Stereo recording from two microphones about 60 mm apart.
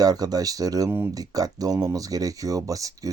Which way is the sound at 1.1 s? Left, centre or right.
Right.